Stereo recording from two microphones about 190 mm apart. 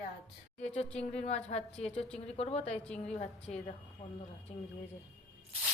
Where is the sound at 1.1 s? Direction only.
35° left (ahead or behind).